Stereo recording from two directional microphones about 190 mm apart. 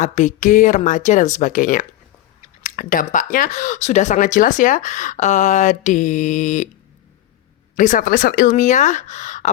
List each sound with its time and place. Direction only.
0.0 s speech: 40° left (ahead or behind)
7.8 s speech: 45° left (ahead or behind)